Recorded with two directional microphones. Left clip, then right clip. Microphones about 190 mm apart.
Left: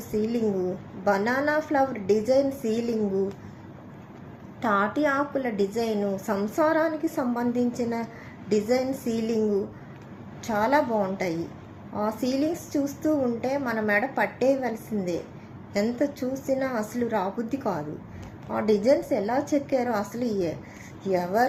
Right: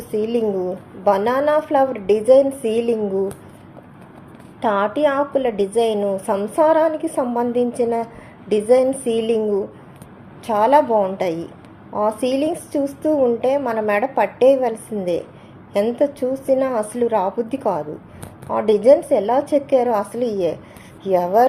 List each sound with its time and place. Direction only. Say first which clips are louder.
0.1 s a woman's voice: right 7 dB; 20° right (ahead or behind)
4.6 s a woman's voice: right 6 dB; 15° right (ahead or behind)
10.4 s a woman's voice: right 9 dB; 15° right (ahead or behind)